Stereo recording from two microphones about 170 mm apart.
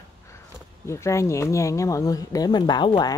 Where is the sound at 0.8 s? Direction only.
15° left (ahead or behind).